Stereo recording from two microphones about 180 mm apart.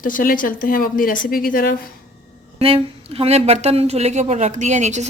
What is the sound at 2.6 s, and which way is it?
A woman's voice, 30° right (ahead or behind).